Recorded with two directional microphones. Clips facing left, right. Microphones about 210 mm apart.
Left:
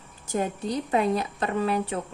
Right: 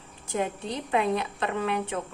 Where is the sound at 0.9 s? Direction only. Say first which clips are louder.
Even; 40° left (ahead or behind).